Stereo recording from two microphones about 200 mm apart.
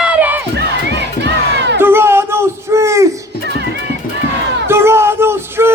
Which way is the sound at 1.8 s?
10° right (ahead or behind).